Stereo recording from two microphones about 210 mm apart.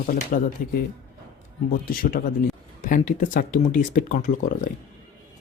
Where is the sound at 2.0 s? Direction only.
45° left (ahead or behind).